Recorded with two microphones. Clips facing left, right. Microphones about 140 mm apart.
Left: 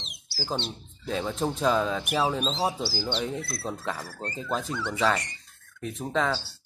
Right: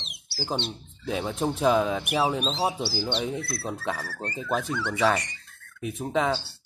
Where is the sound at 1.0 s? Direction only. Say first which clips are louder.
Right 1 dB; 10° right (ahead or behind).